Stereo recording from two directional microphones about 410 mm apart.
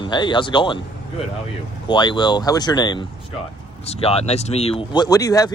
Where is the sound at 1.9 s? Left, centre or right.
Centre.